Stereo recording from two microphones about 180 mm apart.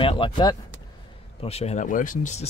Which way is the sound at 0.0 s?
30° left (ahead or behind).